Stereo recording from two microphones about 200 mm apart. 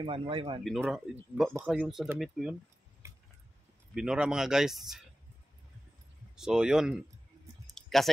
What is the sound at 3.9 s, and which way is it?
Speech, 5° right (ahead or behind).